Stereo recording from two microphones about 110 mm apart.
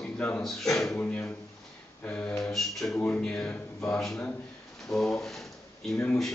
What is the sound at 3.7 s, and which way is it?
Speech, 25° left (ahead or behind).